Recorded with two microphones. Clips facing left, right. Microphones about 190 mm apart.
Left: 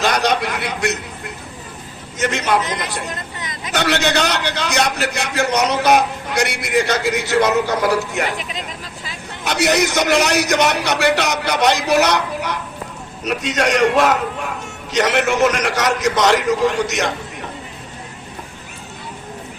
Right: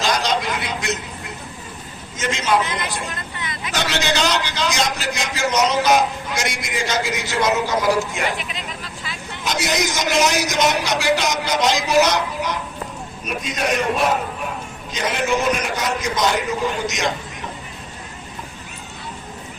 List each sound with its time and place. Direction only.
0.0 s a sound: 60° left (ahead or behind)
2.1 s a man's voice: 65° left (ahead or behind)
3.7 s a man's voice: 60° left (ahead or behind)
9.4 s a man's voice: 65° left (ahead or behind)
13.2 s a man's voice: 75° left (ahead or behind)
14.9 s a man's voice: 70° left (ahead or behind)